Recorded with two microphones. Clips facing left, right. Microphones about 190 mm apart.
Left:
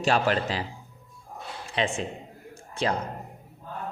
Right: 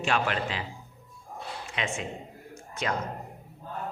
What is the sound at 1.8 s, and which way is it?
Speech, 30° left (ahead or behind).